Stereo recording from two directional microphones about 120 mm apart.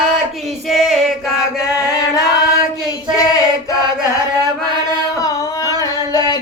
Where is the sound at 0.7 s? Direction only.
Centre (ahead or behind).